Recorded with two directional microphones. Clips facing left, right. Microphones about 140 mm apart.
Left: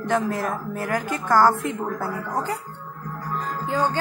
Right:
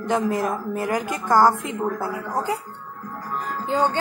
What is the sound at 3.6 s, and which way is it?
Speech, 20° right (ahead or behind).